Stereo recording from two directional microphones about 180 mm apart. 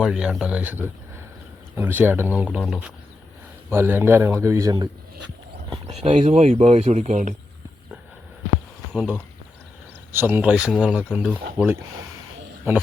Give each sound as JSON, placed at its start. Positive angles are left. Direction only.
{"t": 0.0, "sound": "a man's voice", "side_deg": -5}
{"t": 2.6, "sound": "speech", "side_deg": 5}
{"t": 3.7, "sound": "a man's voice", "side_deg": -15}
{"t": 5.9, "sound": "speech", "side_deg": -40}
{"t": 8.9, "sound": "speech", "side_deg": 0}
{"t": 10.1, "sound": "a man's voice", "side_deg": -10}